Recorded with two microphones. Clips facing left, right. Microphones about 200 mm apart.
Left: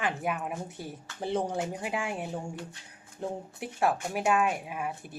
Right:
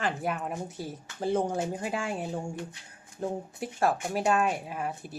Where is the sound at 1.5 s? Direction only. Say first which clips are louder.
Right 1 dB; 15° left (ahead or behind).